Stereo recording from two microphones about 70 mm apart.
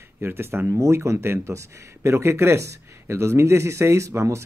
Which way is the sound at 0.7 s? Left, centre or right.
Right.